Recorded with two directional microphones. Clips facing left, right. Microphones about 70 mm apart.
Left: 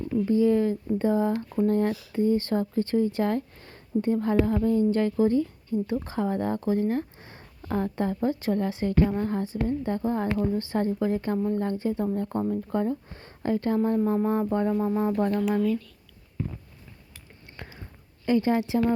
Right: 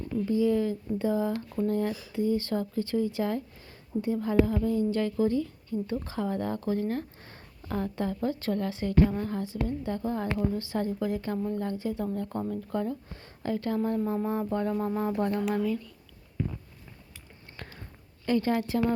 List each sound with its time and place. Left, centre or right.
0.3 s a woman's voice: left
14.7 s speech: centre
17.6 s a sound: centre
18.3 s a woman's voice: centre